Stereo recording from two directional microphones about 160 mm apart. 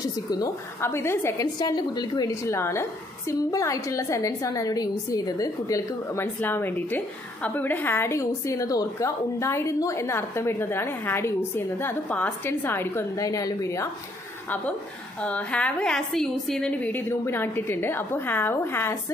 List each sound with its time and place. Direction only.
0.0 s a woman's voice: 25° left (ahead or behind)
15.2 s a woman's voice: 10° left (ahead or behind)